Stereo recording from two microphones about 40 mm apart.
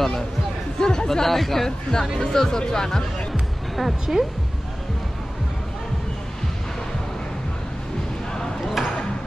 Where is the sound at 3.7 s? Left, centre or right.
Centre.